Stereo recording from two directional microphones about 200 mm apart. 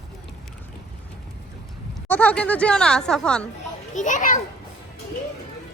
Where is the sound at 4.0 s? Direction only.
40° left (ahead or behind).